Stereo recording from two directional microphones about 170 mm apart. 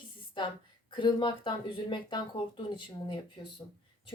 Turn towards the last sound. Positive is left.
turn(degrees=25)  # may be behind; listen again after turning